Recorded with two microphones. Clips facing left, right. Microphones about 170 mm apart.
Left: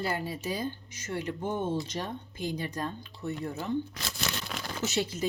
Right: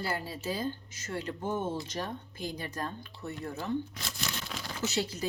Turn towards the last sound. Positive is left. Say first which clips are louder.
# left 2 dB
turn(degrees=20)  # may be behind; listen again after turning